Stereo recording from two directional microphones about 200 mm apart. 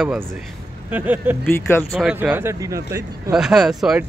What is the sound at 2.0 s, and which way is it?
Speech, 5° right (ahead or behind).